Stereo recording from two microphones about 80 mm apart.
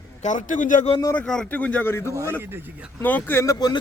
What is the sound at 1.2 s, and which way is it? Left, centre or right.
Speech, centre.